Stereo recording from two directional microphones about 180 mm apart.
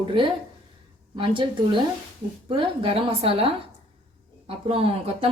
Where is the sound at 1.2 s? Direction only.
30° right (ahead or behind).